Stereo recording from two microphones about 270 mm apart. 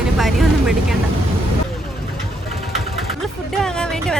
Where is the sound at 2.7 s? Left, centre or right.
Centre.